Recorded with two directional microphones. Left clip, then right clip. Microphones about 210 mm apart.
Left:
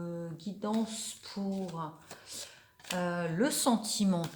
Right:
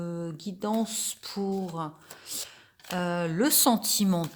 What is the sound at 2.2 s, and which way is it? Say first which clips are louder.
Speech: right 8 dB; 55° right (ahead or behind).